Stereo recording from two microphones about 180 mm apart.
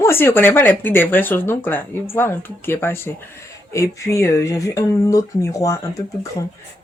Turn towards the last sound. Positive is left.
turn(degrees=15)  # may be behind; listen again after turning